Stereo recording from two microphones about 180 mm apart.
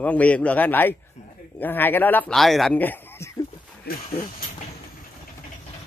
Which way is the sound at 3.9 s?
65° left (ahead or behind).